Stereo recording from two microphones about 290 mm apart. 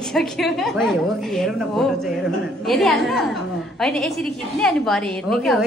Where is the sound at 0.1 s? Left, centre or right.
Centre.